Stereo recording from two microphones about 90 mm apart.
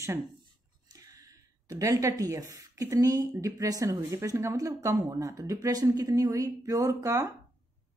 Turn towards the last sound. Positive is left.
turn(degrees=-40)  # may be behind; listen again after turning